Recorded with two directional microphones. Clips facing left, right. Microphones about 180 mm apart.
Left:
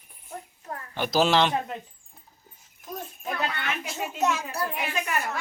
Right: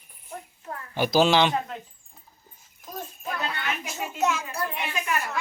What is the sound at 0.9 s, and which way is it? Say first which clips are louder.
Speech: right 2 dB; centre (ahead or behind).